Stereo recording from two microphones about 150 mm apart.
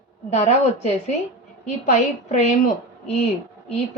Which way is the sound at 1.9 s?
45° left (ahead or behind).